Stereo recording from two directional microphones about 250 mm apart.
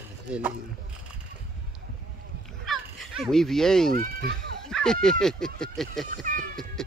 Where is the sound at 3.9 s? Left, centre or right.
Right.